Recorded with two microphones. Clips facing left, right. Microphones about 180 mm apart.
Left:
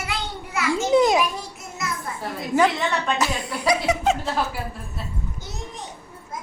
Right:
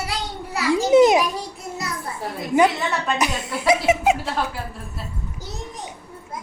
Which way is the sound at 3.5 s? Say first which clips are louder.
Right 4 dB; 25° right (ahead or behind).